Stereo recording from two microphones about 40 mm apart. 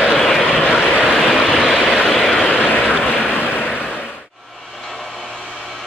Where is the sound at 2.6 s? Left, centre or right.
Left.